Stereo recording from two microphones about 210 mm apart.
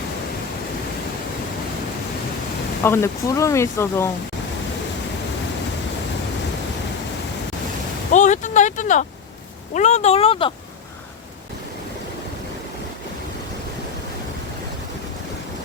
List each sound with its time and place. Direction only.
2.8 s speech: 10° left (ahead or behind)
8.1 s a sound: 35° left (ahead or behind)
9.7 s speech: 35° left (ahead or behind)